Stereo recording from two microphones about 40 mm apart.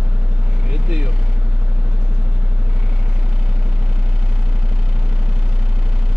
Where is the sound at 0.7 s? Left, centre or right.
Right.